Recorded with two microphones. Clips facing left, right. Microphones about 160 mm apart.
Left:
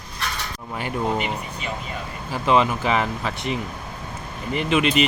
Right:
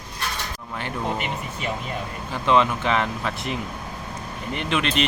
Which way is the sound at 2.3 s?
5° left (ahead or behind).